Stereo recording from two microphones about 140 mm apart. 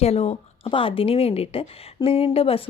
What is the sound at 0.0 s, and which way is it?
Speech, 50° left (ahead or behind).